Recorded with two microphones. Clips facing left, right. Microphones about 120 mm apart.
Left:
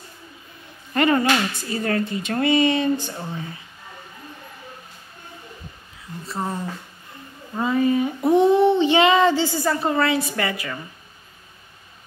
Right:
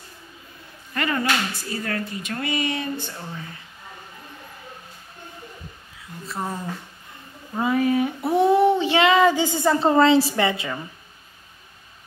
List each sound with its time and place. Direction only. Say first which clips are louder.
0.9 s speech: left 5 dB; 25° left (ahead or behind)
3.1 s speech: left 4 dB; 15° left (ahead or behind)
6.2 s child singing: left 2 dB; centre (ahead or behind)
9.3 s a woman's voice: right 1 dB; 15° right (ahead or behind)